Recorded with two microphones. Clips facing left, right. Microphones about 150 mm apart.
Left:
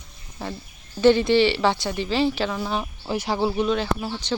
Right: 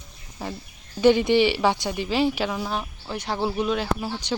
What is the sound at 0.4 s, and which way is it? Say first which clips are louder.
Speech: left 1 dB; 10° right (ahead or behind).